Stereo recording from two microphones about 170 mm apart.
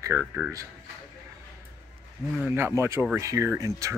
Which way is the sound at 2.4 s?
15° right (ahead or behind).